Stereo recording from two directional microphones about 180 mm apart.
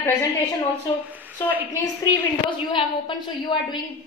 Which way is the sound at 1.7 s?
25° left (ahead or behind).